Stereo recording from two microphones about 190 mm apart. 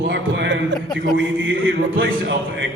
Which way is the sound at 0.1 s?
70° right (ahead or behind).